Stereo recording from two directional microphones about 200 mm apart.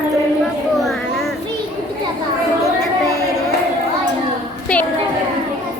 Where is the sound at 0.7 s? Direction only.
Centre (ahead or behind).